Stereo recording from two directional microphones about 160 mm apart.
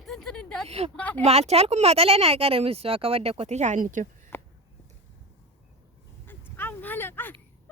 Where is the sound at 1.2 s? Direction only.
40° right (ahead or behind).